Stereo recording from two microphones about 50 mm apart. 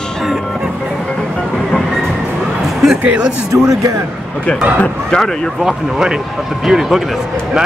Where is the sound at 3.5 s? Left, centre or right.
Right.